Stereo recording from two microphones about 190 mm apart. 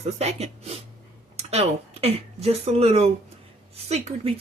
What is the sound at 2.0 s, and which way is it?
Speech, 30° right (ahead or behind).